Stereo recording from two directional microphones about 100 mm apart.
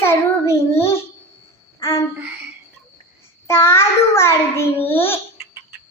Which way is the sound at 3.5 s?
25° left (ahead or behind).